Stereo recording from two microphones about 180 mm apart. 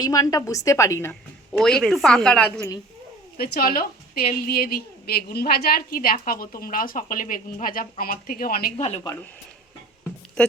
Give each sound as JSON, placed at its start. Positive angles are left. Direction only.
{"t": 0.0, "sound": "a woman's voice", "side_deg": 20}
{"t": 1.5, "sound": "a woman's voice", "side_deg": 0}
{"t": 3.3, "sound": "a woman's voice", "side_deg": 60}